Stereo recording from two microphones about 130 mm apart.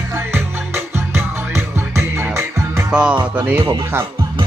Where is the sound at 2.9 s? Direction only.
10° right (ahead or behind).